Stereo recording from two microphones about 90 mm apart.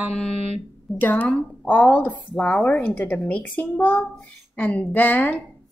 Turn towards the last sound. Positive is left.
turn(degrees=20)  # may be behind; listen again after turning